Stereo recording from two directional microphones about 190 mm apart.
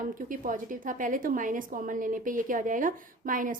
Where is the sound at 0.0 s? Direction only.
45° right (ahead or behind).